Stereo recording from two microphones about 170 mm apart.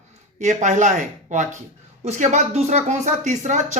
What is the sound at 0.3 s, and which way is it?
Speech, 45° right (ahead or behind).